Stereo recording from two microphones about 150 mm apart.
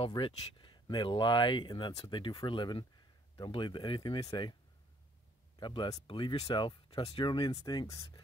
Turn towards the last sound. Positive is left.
turn(degrees=30)  # may be behind; listen again after turning